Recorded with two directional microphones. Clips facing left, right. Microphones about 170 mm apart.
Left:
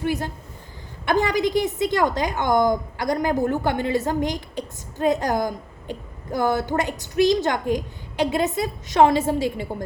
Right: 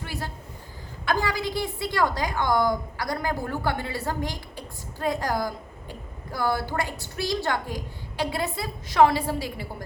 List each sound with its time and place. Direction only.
0.0 s a woman's voice: 20° left (ahead or behind)